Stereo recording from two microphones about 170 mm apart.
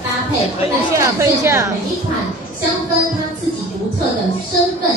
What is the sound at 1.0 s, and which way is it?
Speech, 20° right (ahead or behind).